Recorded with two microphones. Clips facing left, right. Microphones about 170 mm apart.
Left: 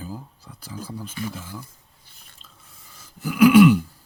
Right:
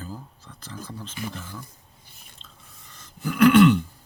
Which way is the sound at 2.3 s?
5° left (ahead or behind).